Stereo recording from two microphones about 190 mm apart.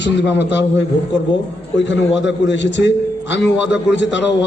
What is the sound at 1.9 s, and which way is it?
A man's voice, 70° left (ahead or behind).